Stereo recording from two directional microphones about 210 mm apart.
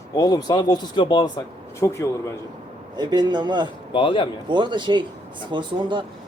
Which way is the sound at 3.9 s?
25° left (ahead or behind).